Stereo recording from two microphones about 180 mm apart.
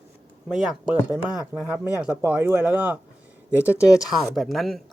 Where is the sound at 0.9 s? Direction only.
20° left (ahead or behind).